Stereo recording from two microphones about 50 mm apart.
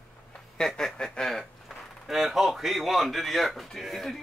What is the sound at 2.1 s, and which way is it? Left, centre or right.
Speech, centre.